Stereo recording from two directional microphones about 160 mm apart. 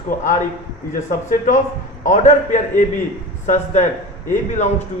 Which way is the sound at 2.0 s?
50° left (ahead or behind).